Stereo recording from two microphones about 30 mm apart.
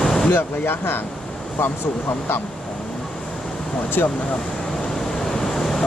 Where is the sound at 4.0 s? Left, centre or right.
Left.